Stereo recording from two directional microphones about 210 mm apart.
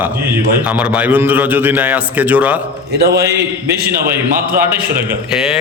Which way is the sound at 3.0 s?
50° right (ahead or behind).